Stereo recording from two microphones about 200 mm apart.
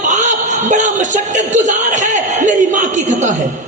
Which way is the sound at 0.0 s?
40° right (ahead or behind).